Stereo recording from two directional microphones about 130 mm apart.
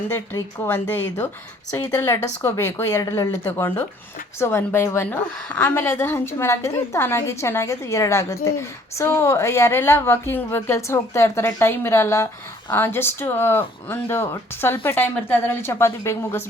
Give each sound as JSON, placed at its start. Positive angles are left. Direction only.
{"t": 0.1, "sound": "a woman's voice", "side_deg": 20}